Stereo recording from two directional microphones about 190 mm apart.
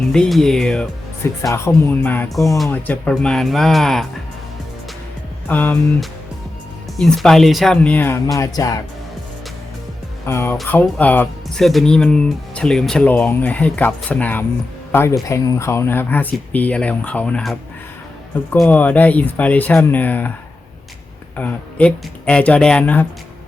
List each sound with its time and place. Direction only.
0.1 s speech: centre (ahead or behind)
5.5 s speech: 10° left (ahead or behind)
10.2 s speech: 10° left (ahead or behind)
21.3 s speech: 5° left (ahead or behind)